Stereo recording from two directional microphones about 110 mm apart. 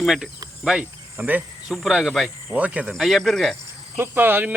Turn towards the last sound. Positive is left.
turn(degrees=-20)  # may be behind; listen again after turning